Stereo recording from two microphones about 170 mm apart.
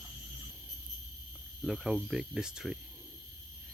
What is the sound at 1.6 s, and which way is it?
Speech, centre (ahead or behind).